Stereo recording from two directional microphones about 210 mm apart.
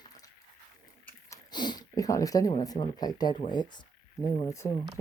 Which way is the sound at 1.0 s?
15° left (ahead or behind).